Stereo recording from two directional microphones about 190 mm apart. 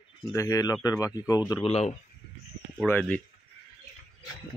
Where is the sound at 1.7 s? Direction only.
35° left (ahead or behind).